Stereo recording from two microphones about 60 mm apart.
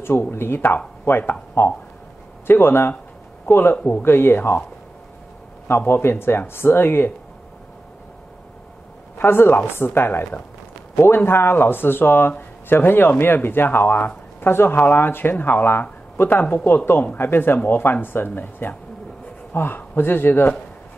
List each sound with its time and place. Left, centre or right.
0.0 s a man's voice: left
5.7 s speech: left
9.2 s speech: left